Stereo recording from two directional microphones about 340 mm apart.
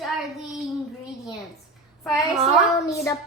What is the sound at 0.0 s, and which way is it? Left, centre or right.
Child singing, centre.